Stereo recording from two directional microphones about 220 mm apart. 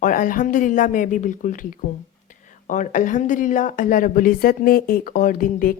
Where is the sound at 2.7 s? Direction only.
35° left (ahead or behind).